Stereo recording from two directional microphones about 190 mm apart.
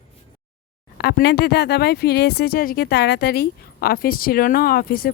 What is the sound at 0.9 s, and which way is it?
Speech, 60° left (ahead or behind).